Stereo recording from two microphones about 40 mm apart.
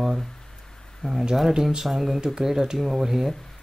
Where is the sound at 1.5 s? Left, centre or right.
Centre.